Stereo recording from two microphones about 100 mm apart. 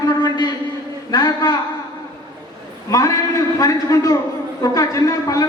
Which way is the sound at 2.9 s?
35° left (ahead or behind).